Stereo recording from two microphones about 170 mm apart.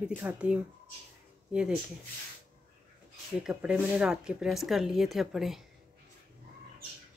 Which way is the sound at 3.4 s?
5° right (ahead or behind).